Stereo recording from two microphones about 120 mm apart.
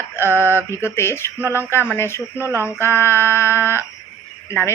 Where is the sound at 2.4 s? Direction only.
20° right (ahead or behind).